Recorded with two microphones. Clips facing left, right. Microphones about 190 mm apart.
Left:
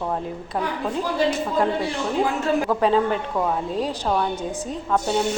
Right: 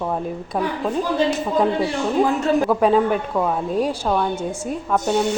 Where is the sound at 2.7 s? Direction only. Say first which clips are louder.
Right 2 dB; 10° right (ahead or behind).